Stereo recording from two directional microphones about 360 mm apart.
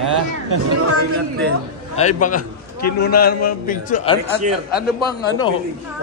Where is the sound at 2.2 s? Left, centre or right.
Left.